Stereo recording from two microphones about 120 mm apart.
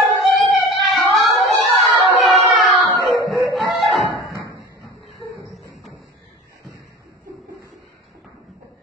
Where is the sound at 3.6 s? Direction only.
Centre (ahead or behind).